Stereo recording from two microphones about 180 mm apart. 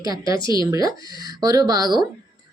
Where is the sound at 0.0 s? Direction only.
20° right (ahead or behind).